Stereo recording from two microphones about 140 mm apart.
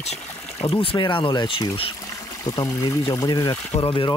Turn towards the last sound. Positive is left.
turn(degrees=40)  # may be behind; listen again after turning